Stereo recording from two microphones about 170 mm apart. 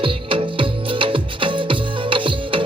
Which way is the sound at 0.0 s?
30° right (ahead or behind).